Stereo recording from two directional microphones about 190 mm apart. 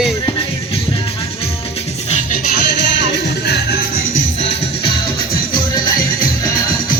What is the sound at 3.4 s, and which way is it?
Music, 60° left (ahead or behind).